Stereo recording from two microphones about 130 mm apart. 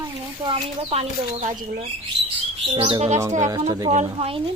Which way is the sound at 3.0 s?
60° right (ahead or behind).